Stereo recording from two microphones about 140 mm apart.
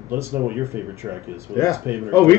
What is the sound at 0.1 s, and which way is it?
Speech, 15° right (ahead or behind).